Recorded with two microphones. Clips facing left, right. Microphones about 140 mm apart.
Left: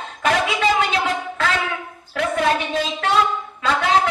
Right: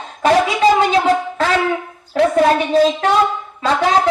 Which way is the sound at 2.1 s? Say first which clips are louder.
Right 7 dB; 35° right (ahead or behind).